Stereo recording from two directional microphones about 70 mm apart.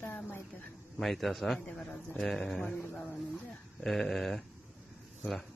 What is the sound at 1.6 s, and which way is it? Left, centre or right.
A man's voice, centre.